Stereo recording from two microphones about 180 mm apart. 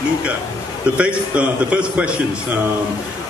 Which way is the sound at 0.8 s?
5° right (ahead or behind).